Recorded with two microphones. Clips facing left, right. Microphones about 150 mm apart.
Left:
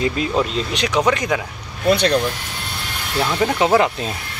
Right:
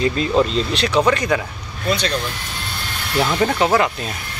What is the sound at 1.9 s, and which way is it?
Speech, 60° left (ahead or behind).